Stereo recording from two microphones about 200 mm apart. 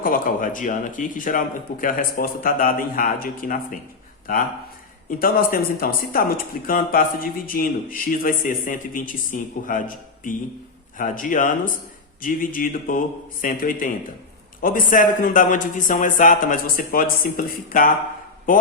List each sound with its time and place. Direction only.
0.0 s speech: 45° left (ahead or behind)
5.0 s speech: 45° left (ahead or behind)